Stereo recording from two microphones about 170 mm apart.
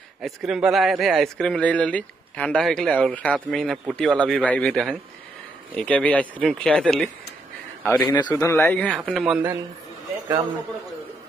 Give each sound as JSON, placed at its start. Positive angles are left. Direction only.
{"t": 0.2, "sound": "speech", "side_deg": 0}